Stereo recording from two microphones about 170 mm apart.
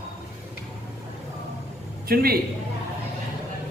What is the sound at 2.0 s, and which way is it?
Speech, 60° right (ahead or behind).